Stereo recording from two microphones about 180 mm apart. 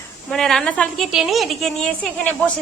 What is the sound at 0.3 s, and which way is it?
A woman's voice, centre (ahead or behind).